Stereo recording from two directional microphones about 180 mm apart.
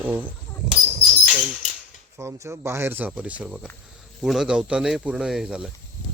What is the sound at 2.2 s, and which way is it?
Speech, 15° right (ahead or behind).